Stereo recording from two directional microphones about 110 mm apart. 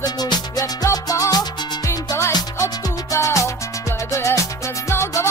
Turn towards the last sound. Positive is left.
turn(degrees=25)  # may be behind; listen again after turning